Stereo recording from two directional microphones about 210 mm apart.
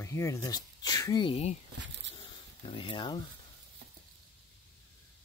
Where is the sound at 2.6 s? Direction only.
25° left (ahead or behind).